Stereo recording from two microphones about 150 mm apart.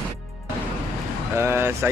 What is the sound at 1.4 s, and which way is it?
Vehicle, 15° right (ahead or behind).